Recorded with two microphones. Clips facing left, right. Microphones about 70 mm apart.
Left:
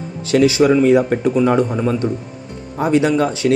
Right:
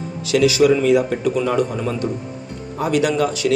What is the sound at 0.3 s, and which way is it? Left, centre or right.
A man's voice, left.